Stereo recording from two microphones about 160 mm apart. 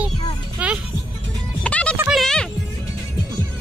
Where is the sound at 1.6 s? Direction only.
5° left (ahead or behind).